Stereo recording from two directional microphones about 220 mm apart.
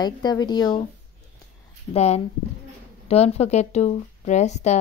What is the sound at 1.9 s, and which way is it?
Speech, 30° left (ahead or behind).